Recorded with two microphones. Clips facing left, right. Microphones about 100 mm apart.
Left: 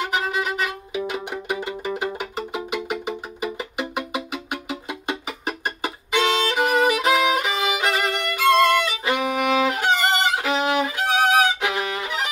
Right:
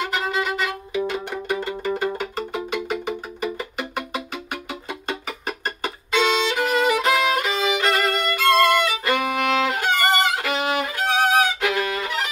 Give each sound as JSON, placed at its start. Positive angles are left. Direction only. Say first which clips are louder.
{"t": 0.1, "sound": "music", "louder": "even", "side_deg": 10}
{"t": 5.8, "sound": "violin", "louder": "right 1 dB", "side_deg": 15}